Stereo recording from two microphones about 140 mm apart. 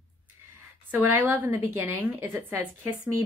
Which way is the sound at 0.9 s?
15° right (ahead or behind).